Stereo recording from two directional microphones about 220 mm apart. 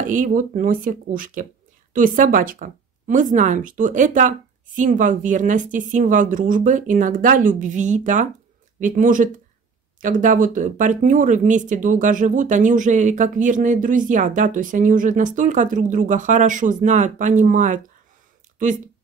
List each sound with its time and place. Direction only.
0.0 s speech: 35° right (ahead or behind)